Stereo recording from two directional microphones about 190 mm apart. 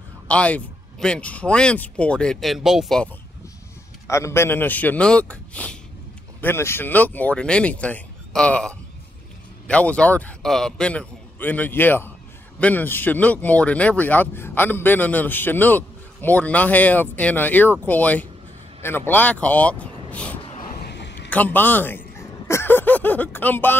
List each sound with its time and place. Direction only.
0.3 s speech: 5° left (ahead or behind)
4.1 s speech: 15° left (ahead or behind)
20.4 s vehicle: 35° left (ahead or behind)
20.8 s a sound: 65° left (ahead or behind)
21.3 s speech: 10° left (ahead or behind)